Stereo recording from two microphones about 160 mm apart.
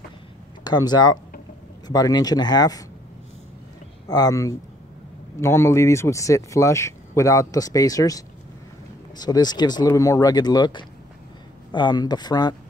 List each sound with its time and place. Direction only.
0.7 s speech: 25° left (ahead or behind)
4.1 s speech: 20° left (ahead or behind)